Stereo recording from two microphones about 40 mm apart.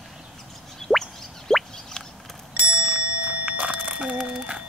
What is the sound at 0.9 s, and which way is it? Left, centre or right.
Plop, centre.